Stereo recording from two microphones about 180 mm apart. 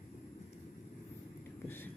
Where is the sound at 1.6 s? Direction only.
10° left (ahead or behind).